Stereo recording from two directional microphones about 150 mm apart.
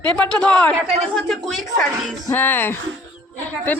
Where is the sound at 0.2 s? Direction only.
5° left (ahead or behind).